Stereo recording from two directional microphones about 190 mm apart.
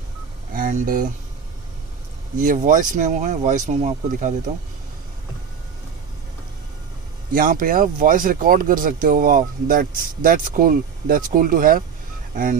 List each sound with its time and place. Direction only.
0.6 s speech: 45° right (ahead or behind)
2.3 s speech: 45° right (ahead or behind)
7.3 s speech: 45° right (ahead or behind)